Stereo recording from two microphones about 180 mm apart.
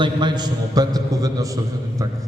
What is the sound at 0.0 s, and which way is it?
A man's voice, 25° right (ahead or behind).